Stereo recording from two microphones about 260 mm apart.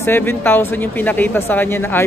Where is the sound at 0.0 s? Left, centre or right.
Centre.